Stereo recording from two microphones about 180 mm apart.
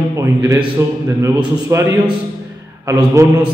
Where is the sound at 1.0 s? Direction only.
15° right (ahead or behind).